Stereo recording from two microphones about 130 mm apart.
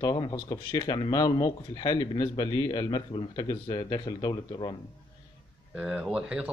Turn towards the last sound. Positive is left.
turn(degrees=-5)  # may be behind; listen again after turning